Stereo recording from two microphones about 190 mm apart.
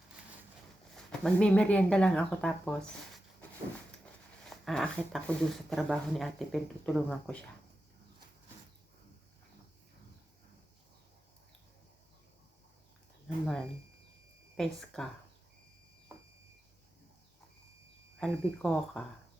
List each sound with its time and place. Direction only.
0.9 s speech: 5° left (ahead or behind)
4.4 s speech: centre (ahead or behind)
14.5 s speech: centre (ahead or behind)
18.2 s speech: centre (ahead or behind)